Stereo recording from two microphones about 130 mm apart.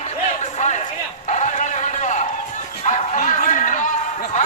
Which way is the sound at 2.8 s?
75° left (ahead or behind).